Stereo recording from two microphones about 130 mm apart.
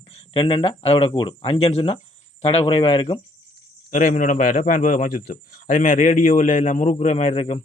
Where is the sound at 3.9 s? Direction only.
85° left; by 7.6 s 55° left (ahead or behind).